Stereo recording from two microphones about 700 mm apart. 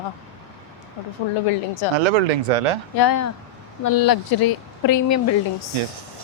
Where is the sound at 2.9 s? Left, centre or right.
Left.